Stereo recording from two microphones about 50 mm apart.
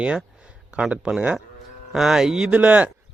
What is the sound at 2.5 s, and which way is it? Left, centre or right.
Speech, right.